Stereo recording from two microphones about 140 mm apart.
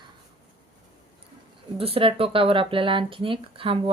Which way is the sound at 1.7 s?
40° right (ahead or behind).